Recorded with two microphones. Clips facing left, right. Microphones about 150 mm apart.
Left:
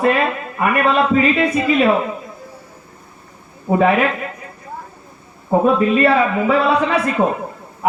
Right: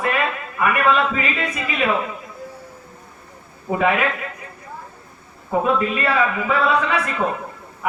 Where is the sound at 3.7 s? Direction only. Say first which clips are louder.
Left 7 dB; 30° left (ahead or behind).